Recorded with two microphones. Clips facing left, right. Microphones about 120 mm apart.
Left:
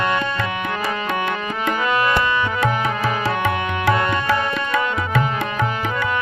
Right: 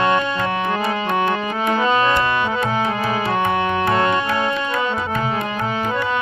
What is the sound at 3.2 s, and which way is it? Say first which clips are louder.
Tabla: right 2 dB; 90° left.